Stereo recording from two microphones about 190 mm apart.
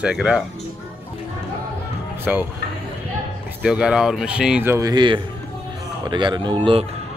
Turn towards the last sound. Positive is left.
turn(degrees=-25)  # may be behind; listen again after turning